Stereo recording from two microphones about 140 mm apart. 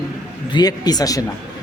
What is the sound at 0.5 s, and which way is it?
Speech, 30° left (ahead or behind).